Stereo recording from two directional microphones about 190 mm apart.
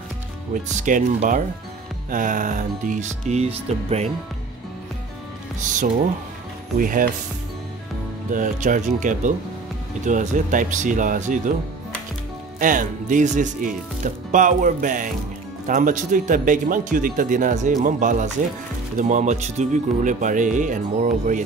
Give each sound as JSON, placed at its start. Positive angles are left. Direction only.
{"t": 0.7, "sound": "speech", "side_deg": -40}
{"t": 5.6, "sound": "speech", "side_deg": -40}
{"t": 8.3, "sound": "speech", "side_deg": -45}
{"t": 12.5, "sound": "speech", "side_deg": -45}